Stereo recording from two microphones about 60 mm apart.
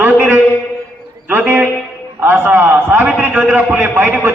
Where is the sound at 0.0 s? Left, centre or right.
Right.